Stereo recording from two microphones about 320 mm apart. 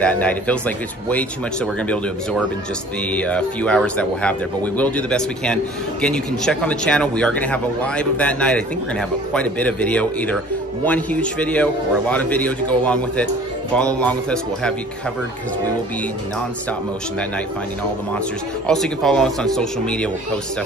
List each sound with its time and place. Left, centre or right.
0.0 s speech: centre
3.1 s speech: centre
18.7 s speech: centre